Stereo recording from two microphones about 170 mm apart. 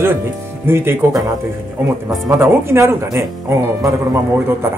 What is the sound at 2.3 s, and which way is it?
Speech, 15° right (ahead or behind).